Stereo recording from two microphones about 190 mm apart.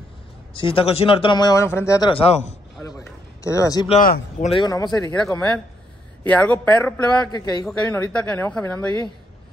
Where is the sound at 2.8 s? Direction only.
15° left (ahead or behind).